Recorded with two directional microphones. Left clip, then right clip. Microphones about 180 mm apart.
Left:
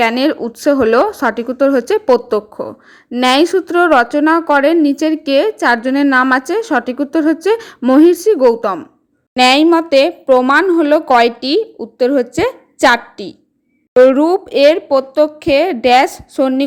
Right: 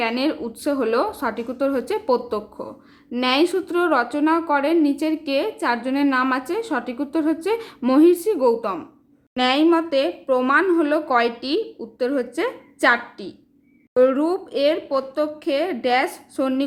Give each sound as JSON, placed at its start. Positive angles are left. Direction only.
{"t": 0.0, "sound": "a woman's voice", "side_deg": 40}